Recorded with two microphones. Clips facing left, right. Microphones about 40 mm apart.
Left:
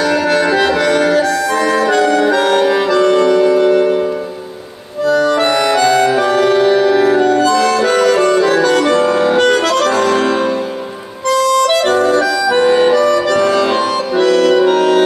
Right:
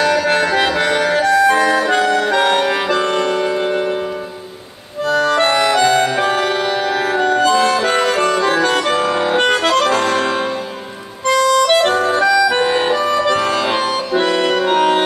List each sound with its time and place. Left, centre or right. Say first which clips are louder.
0.7 s music: left 3 dB; right
2.0 s music: left 4 dB; centre
2.3 s music: left 3 dB; right
5.0 s music: left 3 dB; right
5.6 s music: left 1 dB; centre
6.1 s music: left 4 dB; right
6.5 s music: left 7 dB; centre; by 8.4 s right
8.4 s accordion: left 4 dB; centre
11.2 s music: left 1 dB; right
12.6 s music: left 6 dB; centre